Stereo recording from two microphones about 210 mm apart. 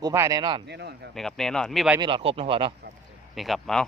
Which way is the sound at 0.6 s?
50° right (ahead or behind).